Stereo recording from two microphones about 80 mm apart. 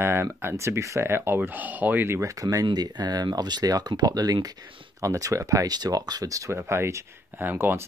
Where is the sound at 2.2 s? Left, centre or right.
Right.